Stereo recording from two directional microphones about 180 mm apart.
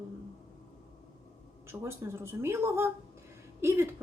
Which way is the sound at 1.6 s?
15° right (ahead or behind).